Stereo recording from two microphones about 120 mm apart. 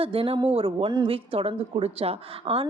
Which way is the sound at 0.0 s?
50° right (ahead or behind).